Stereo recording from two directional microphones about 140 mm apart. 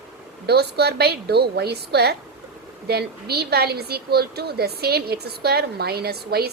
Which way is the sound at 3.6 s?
90° right.